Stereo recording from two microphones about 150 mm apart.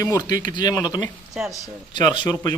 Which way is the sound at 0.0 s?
25° left (ahead or behind).